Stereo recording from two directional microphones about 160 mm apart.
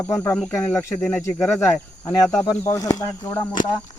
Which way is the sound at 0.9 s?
5° left (ahead or behind).